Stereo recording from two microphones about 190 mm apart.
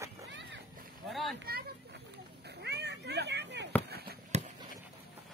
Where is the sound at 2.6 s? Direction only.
65° right (ahead or behind).